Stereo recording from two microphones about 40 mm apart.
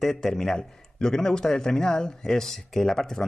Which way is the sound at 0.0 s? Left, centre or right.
Centre.